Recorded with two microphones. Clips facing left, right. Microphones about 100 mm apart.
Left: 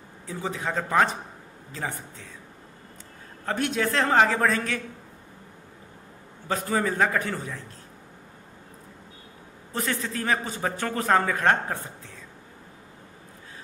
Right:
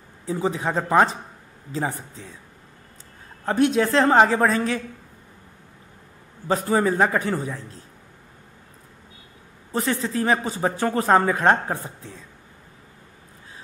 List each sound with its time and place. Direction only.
0.3 s speech: 30° right (ahead or behind)
3.4 s a man's voice: 30° right (ahead or behind)
6.4 s a man's voice: 30° right (ahead or behind)
9.8 s speech: 35° right (ahead or behind)